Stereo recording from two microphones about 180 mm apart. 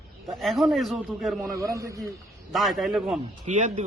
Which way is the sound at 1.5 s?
15° right (ahead or behind).